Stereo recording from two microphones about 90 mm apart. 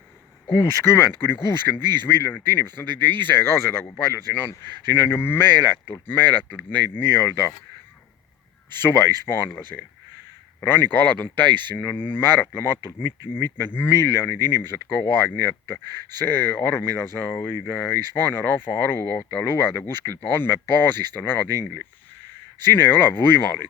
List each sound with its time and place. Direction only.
0.5 s speech: 25° left (ahead or behind)
8.8 s speech: 25° left (ahead or behind)
9.7 s speech: centre (ahead or behind)
10.6 s speech: 20° left (ahead or behind)
17.2 s speech: 15° left (ahead or behind)
17.5 s speech: 25° left (ahead or behind)